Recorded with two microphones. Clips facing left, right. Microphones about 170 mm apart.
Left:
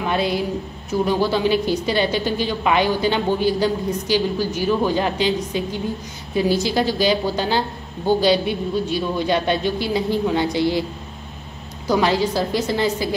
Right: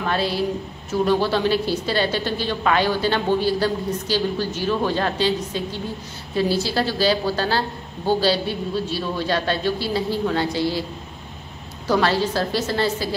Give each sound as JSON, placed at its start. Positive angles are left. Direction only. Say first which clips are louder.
{"t": 0.0, "sound": "a woman's voice", "louder": "left 1 dB", "side_deg": 15}
{"t": 11.9, "sound": "a woman's voice", "louder": "left 1 dB", "side_deg": 15}